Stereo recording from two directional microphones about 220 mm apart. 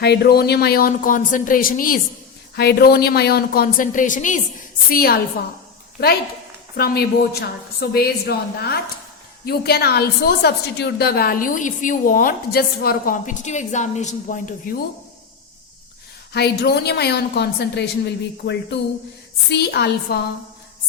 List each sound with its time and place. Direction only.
0.0 s a woman's voice: 50° left (ahead or behind)
16.3 s a woman's voice: 50° left (ahead or behind)